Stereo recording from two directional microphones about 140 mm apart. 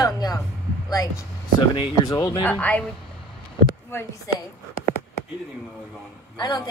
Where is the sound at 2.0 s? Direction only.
25° left (ahead or behind).